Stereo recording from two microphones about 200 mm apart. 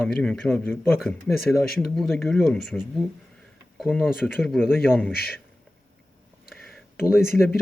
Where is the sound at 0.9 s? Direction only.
Centre (ahead or behind).